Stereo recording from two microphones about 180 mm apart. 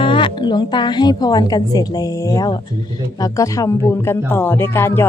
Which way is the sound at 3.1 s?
20° left (ahead or behind).